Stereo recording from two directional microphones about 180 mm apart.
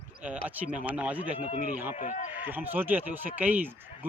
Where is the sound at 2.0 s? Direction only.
40° left (ahead or behind).